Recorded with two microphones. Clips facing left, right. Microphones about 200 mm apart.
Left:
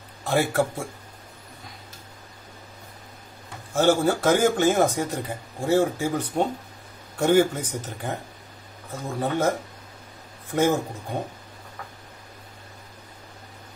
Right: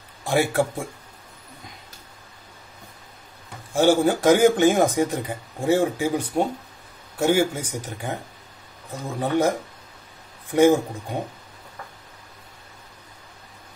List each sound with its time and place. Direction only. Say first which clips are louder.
0.2 s speech: right 1 dB; 15° right (ahead or behind)
3.7 s speech: right 2 dB; 15° right (ahead or behind)
9.2 s speech: right 3 dB; 15° right (ahead or behind)